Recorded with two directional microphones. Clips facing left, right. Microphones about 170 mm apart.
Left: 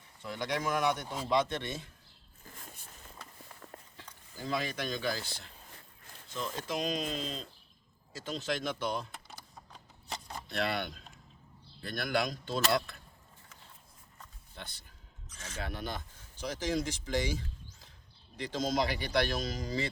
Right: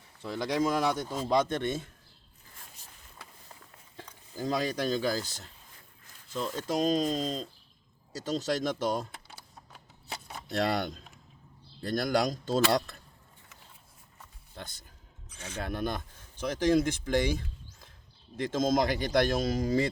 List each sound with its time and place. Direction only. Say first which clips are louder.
0.2 s speech: right 6 dB; 30° right (ahead or behind)
1.3 s speech: right 3 dB; 45° right (ahead or behind)
3.9 s speech: right 8 dB; 40° right (ahead or behind)
9.3 s a sound: even; 5° right (ahead or behind)
10.5 s speech: right 5 dB; 40° right (ahead or behind)
14.5 s speech: right 4 dB; 45° right (ahead or behind)